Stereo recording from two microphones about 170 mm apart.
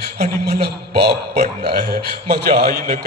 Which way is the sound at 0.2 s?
70° right (ahead or behind).